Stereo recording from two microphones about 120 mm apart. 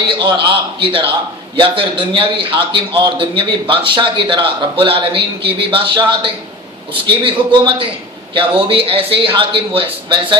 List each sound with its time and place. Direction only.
0.2 s a man's voice: 40° right (ahead or behind)